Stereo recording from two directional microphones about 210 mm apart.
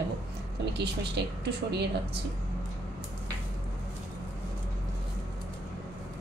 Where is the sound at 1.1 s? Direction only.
50° right (ahead or behind).